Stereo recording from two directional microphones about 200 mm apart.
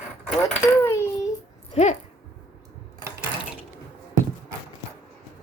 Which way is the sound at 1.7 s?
35° left (ahead or behind).